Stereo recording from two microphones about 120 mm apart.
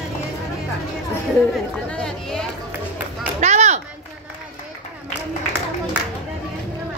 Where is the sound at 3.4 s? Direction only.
75° right (ahead or behind).